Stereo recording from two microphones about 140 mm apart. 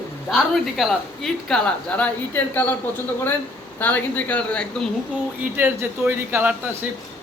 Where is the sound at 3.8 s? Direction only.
10° left (ahead or behind).